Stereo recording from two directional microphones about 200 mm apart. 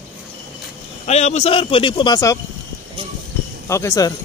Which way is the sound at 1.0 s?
35° left (ahead or behind).